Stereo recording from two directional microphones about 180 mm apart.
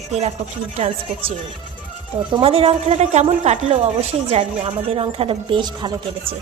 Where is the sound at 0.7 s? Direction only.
35° right (ahead or behind).